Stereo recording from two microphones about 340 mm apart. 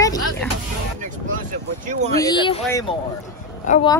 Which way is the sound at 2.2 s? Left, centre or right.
Centre.